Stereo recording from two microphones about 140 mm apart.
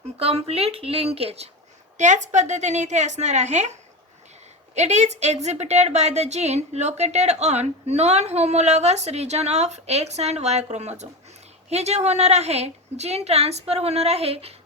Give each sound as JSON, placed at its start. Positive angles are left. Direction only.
{"t": 0.2, "sound": "a woman's voice", "side_deg": -45}
{"t": 2.0, "sound": "a woman's voice", "side_deg": -60}